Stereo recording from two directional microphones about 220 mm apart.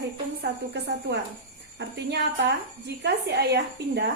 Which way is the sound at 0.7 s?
50° right (ahead or behind).